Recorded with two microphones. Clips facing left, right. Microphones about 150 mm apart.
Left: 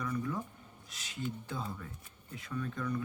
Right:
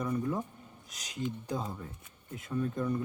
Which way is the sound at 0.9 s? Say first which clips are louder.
Right 2 dB; 40° right (ahead or behind).